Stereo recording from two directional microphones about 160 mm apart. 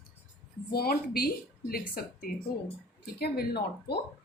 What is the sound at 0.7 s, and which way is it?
A woman's voice, 75° left (ahead or behind).